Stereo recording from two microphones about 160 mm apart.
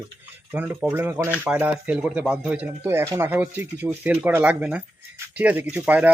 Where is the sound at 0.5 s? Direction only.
10° right (ahead or behind).